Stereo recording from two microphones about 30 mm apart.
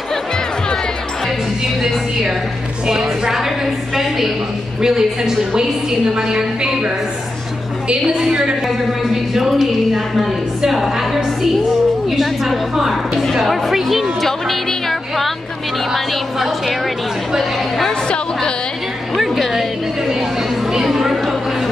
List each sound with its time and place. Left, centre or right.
1.8 s a woman's voice: centre
3.9 s a sound: centre
4.8 s a woman's voice: right
8.2 s a woman's voice: right
8.6 s a woman's voice: centre
12.2 s a woman's voice: centre
15.9 s a woman's voice: centre
19.1 s music: centre
20.7 s a sound: centre